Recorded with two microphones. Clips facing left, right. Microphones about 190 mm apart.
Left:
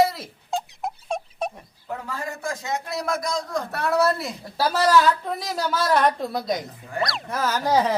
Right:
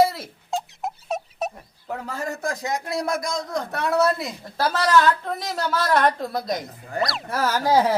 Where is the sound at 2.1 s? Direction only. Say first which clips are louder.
Right 3 dB; 40° right (ahead or behind).